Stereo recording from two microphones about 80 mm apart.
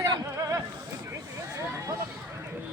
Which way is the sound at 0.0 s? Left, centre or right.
Right.